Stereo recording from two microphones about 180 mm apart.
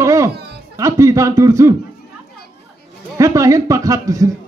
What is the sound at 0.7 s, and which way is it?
A man's voice, 15° right (ahead or behind).